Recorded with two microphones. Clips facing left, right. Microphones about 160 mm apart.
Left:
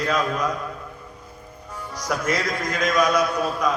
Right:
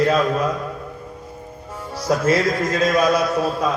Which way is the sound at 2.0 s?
30° right (ahead or behind).